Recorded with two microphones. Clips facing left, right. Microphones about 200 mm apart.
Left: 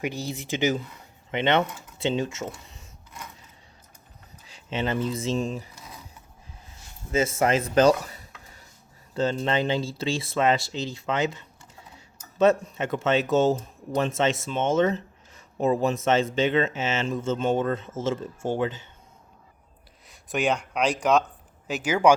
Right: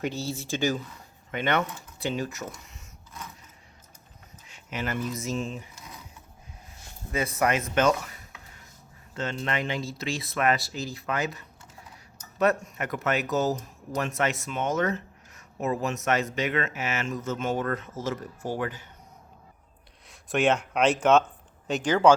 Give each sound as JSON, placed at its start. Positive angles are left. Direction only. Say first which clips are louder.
{"t": 0.0, "sound": "speech", "louder": "even", "side_deg": 15}
{"t": 4.4, "sound": "speech", "louder": "left 5 dB", "side_deg": 30}
{"t": 7.3, "sound": "dishes", "louder": "left 3 dB", "side_deg": 30}
{"t": 9.1, "sound": "speech", "louder": "left 6 dB", "side_deg": 30}
{"t": 20.1, "sound": "speech", "louder": "right 2 dB", "side_deg": 0}